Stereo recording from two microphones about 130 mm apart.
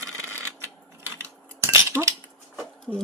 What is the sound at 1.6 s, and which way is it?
Cutlery, 20° right (ahead or behind).